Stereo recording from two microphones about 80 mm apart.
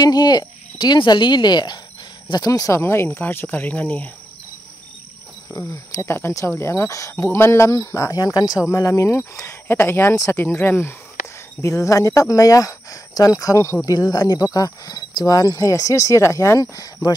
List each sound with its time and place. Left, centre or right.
0.0 s speech: left
2.8 s speech: left
5.7 s speech: left
8.6 s speech: left
11.6 s speech: left